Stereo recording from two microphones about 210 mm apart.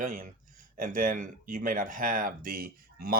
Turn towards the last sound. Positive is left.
turn(degrees=-45)  # may be behind; listen again after turning